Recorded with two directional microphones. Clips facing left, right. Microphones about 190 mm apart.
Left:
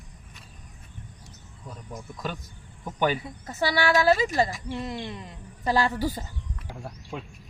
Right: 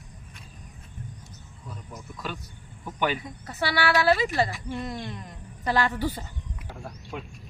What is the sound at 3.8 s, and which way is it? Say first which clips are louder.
Speech: left 1 dB; 40° left (ahead or behind).